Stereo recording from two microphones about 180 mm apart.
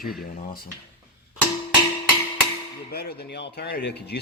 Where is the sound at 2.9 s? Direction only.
65° left (ahead or behind).